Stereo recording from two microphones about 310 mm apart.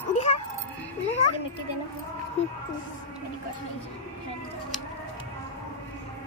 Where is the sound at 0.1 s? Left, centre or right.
Left.